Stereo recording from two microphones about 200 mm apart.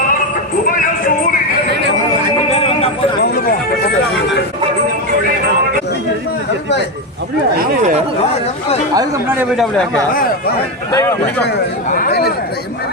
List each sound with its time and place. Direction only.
9.0 s speech: 15° right (ahead or behind)
10.9 s speech: 10° left (ahead or behind)
11.9 s speech: 45° left (ahead or behind)